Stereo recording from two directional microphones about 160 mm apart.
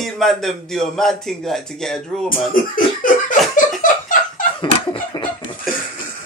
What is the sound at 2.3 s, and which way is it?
Speech, 60° left (ahead or behind).